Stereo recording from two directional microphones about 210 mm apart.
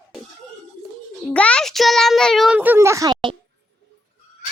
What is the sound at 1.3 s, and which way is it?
Speech, 5° left (ahead or behind).